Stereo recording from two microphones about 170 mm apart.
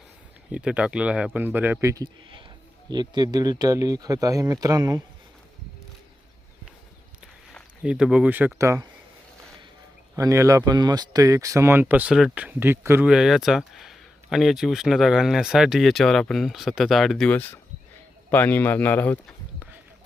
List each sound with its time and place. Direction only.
0.5 s speech: 5° right (ahead or behind); by 5.0 s 20° right (ahead or behind)
7.9 s speech: 5° right (ahead or behind)
10.2 s speech: 20° right (ahead or behind)
13.1 s speech: centre (ahead or behind)